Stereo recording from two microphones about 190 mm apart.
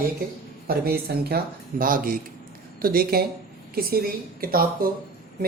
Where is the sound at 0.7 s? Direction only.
55° right (ahead or behind).